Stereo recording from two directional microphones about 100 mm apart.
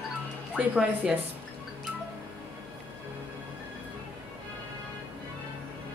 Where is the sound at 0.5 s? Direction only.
10° right (ahead or behind).